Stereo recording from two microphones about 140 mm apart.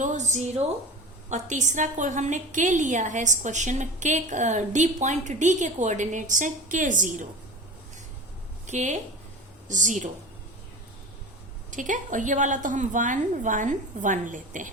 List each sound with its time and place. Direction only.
0.0 s a woman's voice: 60° right (ahead or behind)
8.6 s a woman's voice: 55° right (ahead or behind)
11.7 s a woman's voice: 65° right (ahead or behind)